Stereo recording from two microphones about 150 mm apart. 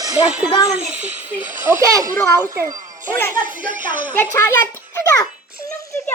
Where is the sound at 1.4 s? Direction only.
60° right (ahead or behind).